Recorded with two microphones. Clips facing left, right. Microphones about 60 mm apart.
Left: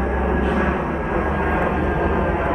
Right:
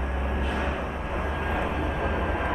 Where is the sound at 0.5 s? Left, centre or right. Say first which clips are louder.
Left 9 dB; left.